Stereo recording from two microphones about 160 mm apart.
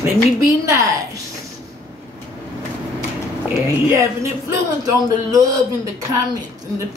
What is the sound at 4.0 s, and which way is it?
Speech, 20° right (ahead or behind).